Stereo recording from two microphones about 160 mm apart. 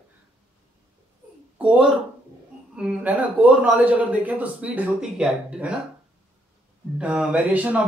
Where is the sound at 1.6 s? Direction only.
5° right (ahead or behind).